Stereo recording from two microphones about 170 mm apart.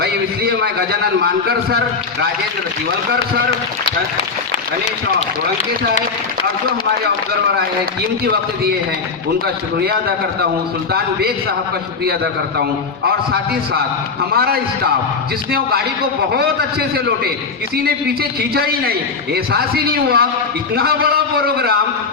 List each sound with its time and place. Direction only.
0.0 s a man's voice: 70° right (ahead or behind)
12.0 s a man's voice: 70° right (ahead or behind)
16.3 s a man's voice: 65° right (ahead or behind)